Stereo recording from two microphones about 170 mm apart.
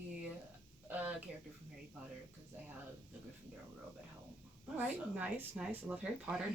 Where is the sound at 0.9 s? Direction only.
10° right (ahead or behind).